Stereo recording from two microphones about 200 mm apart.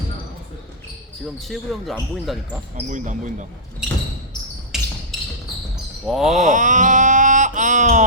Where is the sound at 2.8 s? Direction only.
40° right (ahead or behind).